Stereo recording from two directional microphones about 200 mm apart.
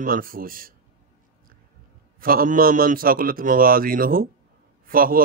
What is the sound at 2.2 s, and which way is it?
A man's voice, 45° right (ahead or behind).